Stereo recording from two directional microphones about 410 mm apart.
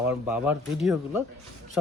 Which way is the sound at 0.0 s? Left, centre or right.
Centre.